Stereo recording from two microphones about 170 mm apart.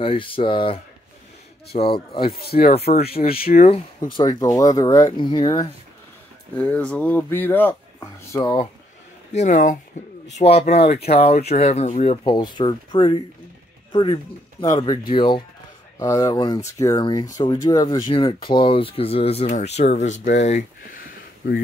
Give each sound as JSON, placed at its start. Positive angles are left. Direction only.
{"t": 0.0, "sound": "speech", "side_deg": 30}
{"t": 2.5, "sound": "speech", "side_deg": 45}
{"t": 3.4, "sound": "speech", "side_deg": 55}
{"t": 3.7, "sound": "speech", "side_deg": 25}
{"t": 6.5, "sound": "speech", "side_deg": 10}
{"t": 8.3, "sound": "speech", "side_deg": 25}
{"t": 9.3, "sound": "speech", "side_deg": 45}
{"t": 10.3, "sound": "speech", "side_deg": 35}